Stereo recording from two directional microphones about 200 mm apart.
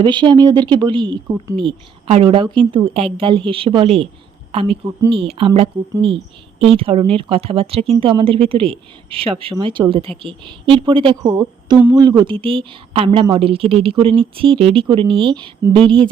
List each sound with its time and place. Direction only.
0.0 s speech: 25° right (ahead or behind)